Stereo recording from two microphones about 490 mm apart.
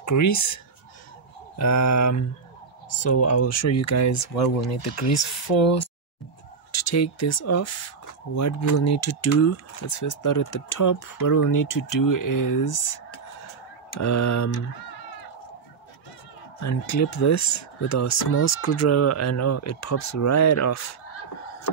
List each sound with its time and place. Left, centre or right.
0.0 s speech: left
1.6 s speech: left
6.7 s speech: left
16.6 s speech: left